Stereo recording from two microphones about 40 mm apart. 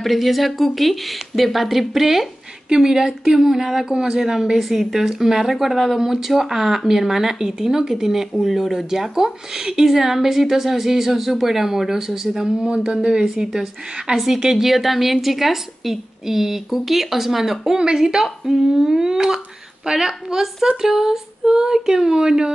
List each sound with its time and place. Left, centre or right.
0.0 s a woman's voice: centre